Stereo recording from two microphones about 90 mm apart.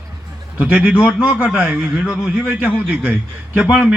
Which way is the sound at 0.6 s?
15° right (ahead or behind).